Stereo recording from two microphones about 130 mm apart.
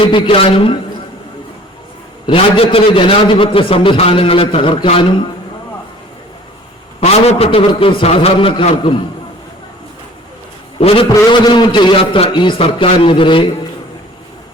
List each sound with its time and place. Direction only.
0.0 s a man's voice: 40° left (ahead or behind)
2.2 s a man's voice: 40° left (ahead or behind)
7.0 s a man's voice: 55° left (ahead or behind)
10.8 s a man's voice: 45° left (ahead or behind)